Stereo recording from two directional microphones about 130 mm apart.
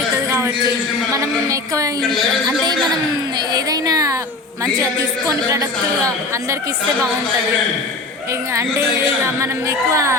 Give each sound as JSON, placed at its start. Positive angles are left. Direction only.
{"t": 0.3, "sound": "a sound", "side_deg": -20}
{"t": 1.1, "sound": "a woman's voice", "side_deg": -25}
{"t": 2.0, "sound": "a woman's voice", "side_deg": 0}
{"t": 3.3, "sound": "a sound", "side_deg": -30}
{"t": 5.3, "sound": "speech", "side_deg": -25}
{"t": 8.5, "sound": "speech", "side_deg": -20}